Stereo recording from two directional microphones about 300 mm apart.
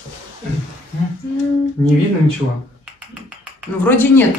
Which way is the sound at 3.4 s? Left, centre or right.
Centre.